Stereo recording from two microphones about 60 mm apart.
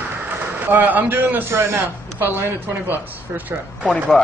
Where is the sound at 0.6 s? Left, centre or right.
Right.